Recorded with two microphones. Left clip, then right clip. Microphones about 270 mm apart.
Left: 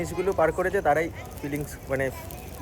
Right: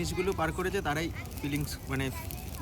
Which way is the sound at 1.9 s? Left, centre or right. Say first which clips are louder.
Left 9 dB; centre.